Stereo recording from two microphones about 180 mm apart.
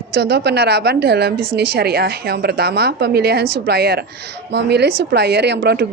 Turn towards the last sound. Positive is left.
turn(degrees=-65)  # may be behind; listen again after turning